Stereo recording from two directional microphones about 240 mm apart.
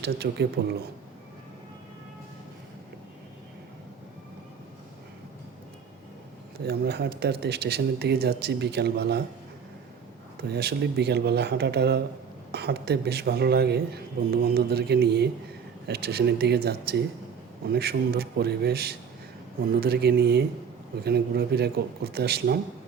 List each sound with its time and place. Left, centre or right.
0.0 s a man's voice: right
6.6 s a man's voice: right
10.4 s a man's voice: right